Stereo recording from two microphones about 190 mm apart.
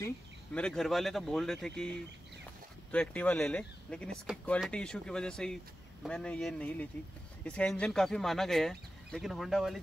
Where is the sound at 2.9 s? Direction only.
5° left (ahead or behind).